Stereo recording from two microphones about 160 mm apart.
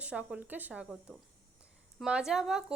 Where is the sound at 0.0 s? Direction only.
10° right (ahead or behind).